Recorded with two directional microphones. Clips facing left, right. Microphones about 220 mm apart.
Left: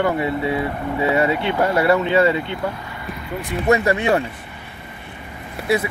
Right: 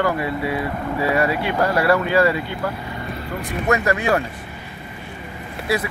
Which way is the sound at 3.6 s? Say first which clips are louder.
Left 3 dB; 25° left (ahead or behind).